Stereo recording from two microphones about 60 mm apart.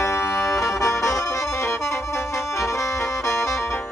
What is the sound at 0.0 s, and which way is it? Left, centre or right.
Music, left.